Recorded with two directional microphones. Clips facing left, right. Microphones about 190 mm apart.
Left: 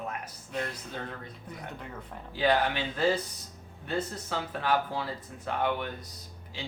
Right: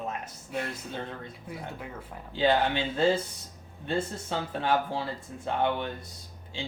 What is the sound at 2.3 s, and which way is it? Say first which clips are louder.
Speech: right 2 dB; 25° right (ahead or behind).